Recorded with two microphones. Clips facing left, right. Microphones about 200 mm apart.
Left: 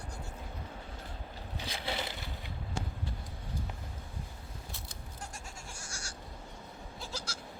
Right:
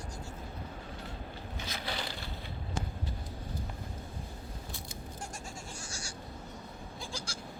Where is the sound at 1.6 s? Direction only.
25° left (ahead or behind).